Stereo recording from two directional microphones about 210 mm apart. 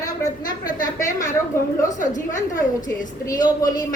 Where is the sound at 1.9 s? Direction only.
35° left (ahead or behind).